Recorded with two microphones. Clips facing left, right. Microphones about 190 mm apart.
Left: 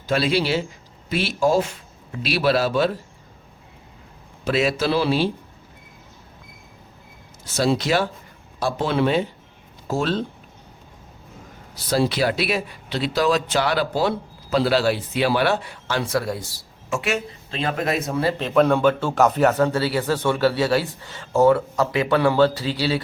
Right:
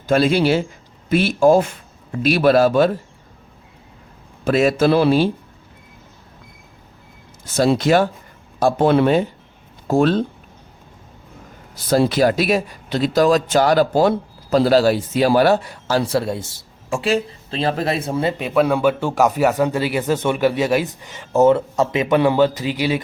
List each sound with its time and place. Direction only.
0.1 s speech: 50° right (ahead or behind)
4.4 s speech: 50° right (ahead or behind)
7.4 s speech: 50° right (ahead or behind)
11.7 s speech: 50° right (ahead or behind); by 18.4 s 20° right (ahead or behind)
18.4 s a man's voice: 5° right (ahead or behind)